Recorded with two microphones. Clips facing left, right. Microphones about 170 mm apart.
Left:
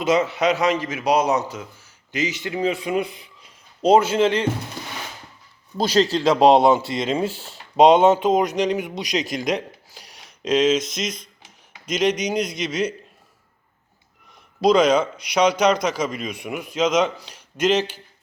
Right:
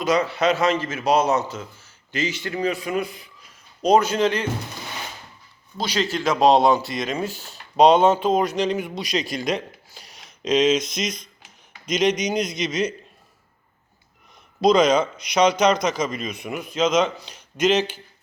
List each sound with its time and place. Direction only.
0.0 s a man's voice: 25° left (ahead or behind)
5.7 s speech: 40° left (ahead or behind); by 12.9 s 10° left (ahead or behind)
14.6 s speech: 10° left (ahead or behind)